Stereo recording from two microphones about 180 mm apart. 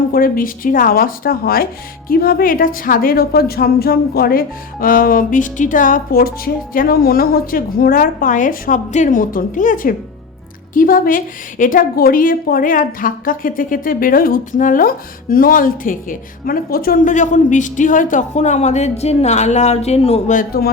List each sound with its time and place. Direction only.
0.1 s a woman's voice: 50° left (ahead or behind)